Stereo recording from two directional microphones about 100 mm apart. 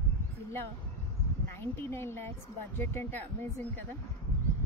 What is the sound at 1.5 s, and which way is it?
Speech, 25° left (ahead or behind).